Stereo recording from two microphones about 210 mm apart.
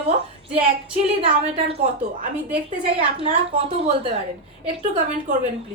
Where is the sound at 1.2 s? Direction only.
30° right (ahead or behind).